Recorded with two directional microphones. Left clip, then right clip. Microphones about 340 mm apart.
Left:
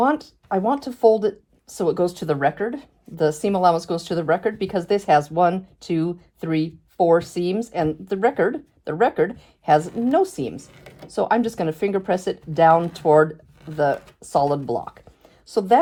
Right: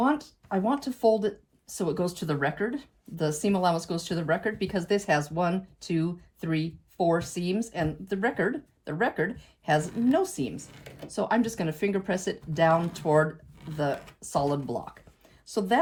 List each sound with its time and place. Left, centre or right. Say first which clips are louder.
0.0 s speech: left 7 dB; left